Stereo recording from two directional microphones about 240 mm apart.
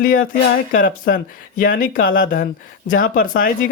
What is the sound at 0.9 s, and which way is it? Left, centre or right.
Speech, left.